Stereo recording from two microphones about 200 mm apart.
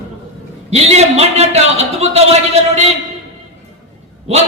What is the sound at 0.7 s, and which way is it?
A man's voice, 30° right (ahead or behind).